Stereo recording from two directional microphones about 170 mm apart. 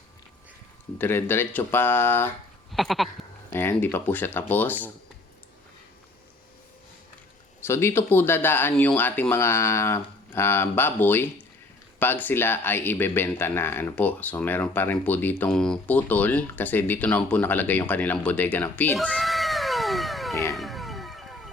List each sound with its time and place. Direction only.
0.9 s speech: 15° left (ahead or behind)
2.7 s sheep: centre (ahead or behind)
3.5 s speech: 15° left (ahead or behind)
7.6 s speech: 15° left (ahead or behind)
20.3 s music: 20° left (ahead or behind)
20.6 s a sound: centre (ahead or behind)